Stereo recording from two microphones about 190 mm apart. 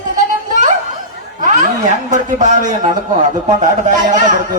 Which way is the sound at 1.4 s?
40° right (ahead or behind).